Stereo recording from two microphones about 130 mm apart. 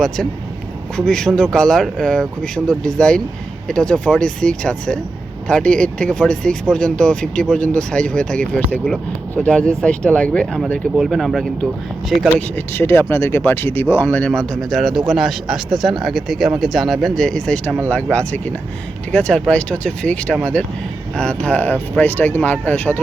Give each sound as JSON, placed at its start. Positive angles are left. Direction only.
{"t": 0.9, "sound": "a man's voice", "side_deg": 5}
{"t": 12.5, "sound": "a man's voice", "side_deg": 15}